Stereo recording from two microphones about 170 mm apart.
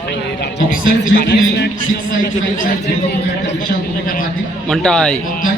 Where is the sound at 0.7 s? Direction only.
60° left (ahead or behind).